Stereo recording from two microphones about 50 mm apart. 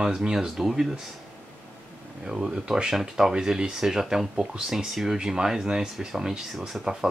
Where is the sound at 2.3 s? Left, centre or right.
Centre.